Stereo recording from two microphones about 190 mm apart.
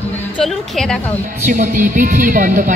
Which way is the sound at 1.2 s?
40° right (ahead or behind).